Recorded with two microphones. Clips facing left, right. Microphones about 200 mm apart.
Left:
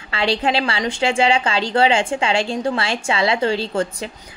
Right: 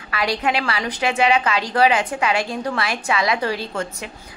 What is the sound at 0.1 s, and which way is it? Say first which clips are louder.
A woman's voice: left 2 dB; 30° left (ahead or behind).